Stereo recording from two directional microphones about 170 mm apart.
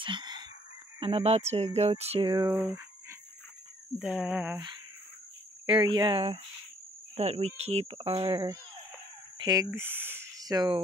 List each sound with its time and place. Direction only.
0.0 s chicken: 25° right (ahead or behind)
0.9 s speech: 30° right (ahead or behind)
2.3 s speech: 20° right (ahead or behind)
2.6 s a sound: 15° right (ahead or behind)
4.0 s cricket: 5° right (ahead or behind)
5.7 s speech: 25° right (ahead or behind)
8.2 s speech: 20° right (ahead or behind)
9.8 s speech: 10° right (ahead or behind)